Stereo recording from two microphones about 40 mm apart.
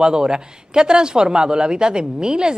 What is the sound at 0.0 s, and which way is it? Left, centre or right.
A woman's voice, centre.